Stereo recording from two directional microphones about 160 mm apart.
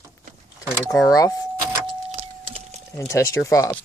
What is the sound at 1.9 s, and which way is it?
Vehicle, 40° right (ahead or behind).